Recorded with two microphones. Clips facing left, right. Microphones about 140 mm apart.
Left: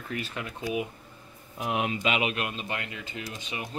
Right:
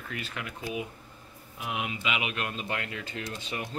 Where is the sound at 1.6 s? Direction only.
40° left (ahead or behind).